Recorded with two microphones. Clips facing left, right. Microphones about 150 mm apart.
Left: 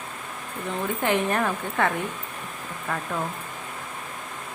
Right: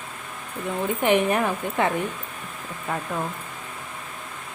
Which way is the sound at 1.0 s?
15° right (ahead or behind).